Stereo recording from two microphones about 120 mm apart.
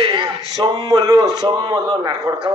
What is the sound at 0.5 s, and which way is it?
A man's voice, 35° right (ahead or behind).